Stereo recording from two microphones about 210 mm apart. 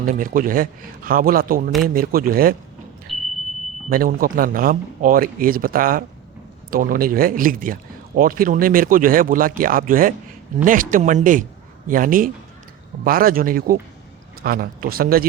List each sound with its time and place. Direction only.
0.0 s a man's voice: 40° right (ahead or behind)
3.1 s vehicle: centre (ahead or behind)
3.8 s a man's voice: 45° right (ahead or behind)